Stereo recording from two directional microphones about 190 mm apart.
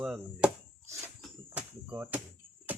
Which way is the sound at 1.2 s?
5° right (ahead or behind).